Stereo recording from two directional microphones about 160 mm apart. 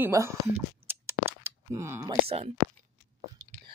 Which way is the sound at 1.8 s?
20° right (ahead or behind).